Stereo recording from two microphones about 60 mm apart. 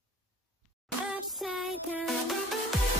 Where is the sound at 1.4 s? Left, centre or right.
Centre.